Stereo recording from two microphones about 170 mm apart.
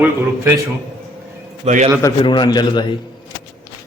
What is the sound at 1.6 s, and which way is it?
Speech, 45° right (ahead or behind).